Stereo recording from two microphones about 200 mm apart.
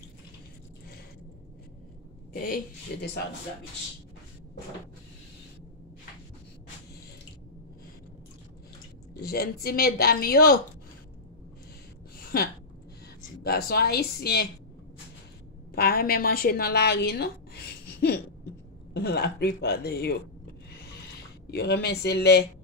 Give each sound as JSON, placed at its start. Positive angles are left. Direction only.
{"t": 2.4, "sound": "a woman's voice", "side_deg": 45}
{"t": 9.1, "sound": "a woman's voice", "side_deg": 50}
{"t": 12.2, "sound": "a sound", "side_deg": 50}
{"t": 13.4, "sound": "a woman's voice", "side_deg": 50}
{"t": 15.7, "sound": "a woman's voice", "side_deg": 50}
{"t": 18.9, "sound": "a woman's voice", "side_deg": 55}
{"t": 21.5, "sound": "speech", "side_deg": 55}